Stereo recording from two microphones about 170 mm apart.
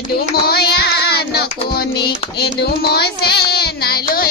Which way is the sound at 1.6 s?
70° left (ahead or behind).